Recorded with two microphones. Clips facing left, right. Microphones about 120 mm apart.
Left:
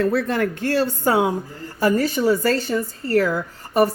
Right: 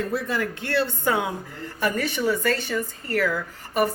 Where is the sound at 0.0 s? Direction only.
65° left (ahead or behind).